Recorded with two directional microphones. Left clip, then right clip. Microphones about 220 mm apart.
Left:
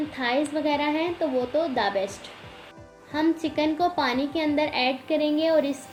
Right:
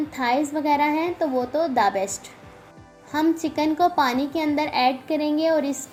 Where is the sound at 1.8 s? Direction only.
35° right (ahead or behind).